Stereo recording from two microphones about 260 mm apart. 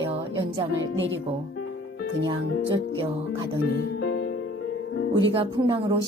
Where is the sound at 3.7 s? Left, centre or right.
Left.